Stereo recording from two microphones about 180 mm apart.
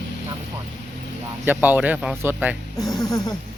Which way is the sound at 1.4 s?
10° right (ahead or behind).